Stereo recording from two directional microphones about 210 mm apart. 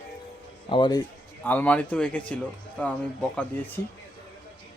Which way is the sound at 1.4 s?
10° left (ahead or behind).